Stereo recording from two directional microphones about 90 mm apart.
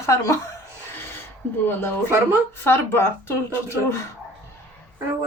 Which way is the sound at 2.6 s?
25° left (ahead or behind).